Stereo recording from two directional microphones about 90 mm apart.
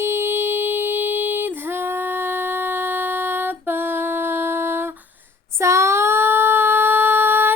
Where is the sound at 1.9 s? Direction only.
25° right (ahead or behind).